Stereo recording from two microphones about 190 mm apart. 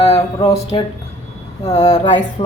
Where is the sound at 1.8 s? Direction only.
20° left (ahead or behind).